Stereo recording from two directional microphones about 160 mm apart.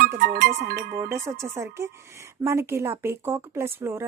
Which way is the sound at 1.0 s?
15° right (ahead or behind).